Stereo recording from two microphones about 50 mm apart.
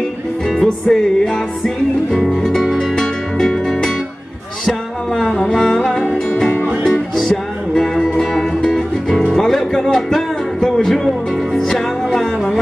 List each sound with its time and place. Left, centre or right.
0.5 s music: centre
5.2 s music: centre
6.9 s music: centre